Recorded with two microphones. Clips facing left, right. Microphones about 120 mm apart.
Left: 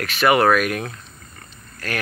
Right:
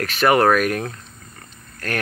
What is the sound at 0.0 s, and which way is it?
Speech, 40° right (ahead or behind).